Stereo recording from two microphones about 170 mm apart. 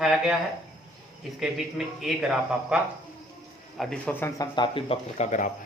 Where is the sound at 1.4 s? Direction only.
Centre (ahead or behind).